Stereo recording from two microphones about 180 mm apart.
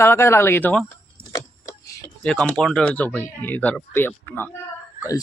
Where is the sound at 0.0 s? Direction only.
15° left (ahead or behind).